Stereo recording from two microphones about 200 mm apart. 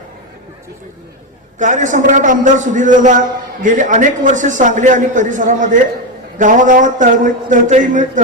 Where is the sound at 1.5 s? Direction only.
40° right (ahead or behind).